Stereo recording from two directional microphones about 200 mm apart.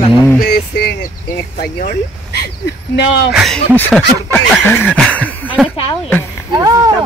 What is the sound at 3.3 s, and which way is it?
Speech, centre (ahead or behind).